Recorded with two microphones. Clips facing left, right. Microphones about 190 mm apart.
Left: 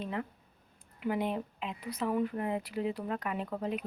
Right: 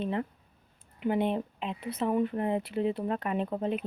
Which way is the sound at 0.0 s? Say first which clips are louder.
Right 5 dB; 30° right (ahead or behind).